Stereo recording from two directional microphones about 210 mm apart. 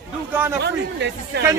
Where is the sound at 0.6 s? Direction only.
55° right (ahead or behind).